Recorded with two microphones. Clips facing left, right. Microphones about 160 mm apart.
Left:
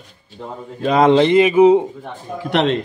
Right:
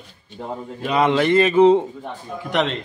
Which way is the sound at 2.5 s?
60° left (ahead or behind).